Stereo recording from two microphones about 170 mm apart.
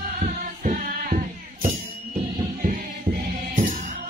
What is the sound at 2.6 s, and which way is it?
Music, 55° right (ahead or behind).